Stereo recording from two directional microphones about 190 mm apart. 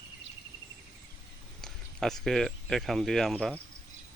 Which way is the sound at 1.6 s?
Centre (ahead or behind).